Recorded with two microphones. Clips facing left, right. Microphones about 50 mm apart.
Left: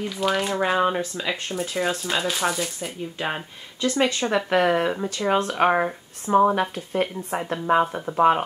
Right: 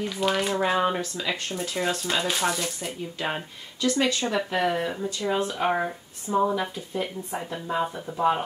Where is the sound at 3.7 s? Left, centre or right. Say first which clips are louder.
Left 2 dB; left.